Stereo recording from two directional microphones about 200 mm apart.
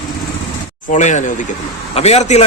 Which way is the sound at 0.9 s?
35° left (ahead or behind).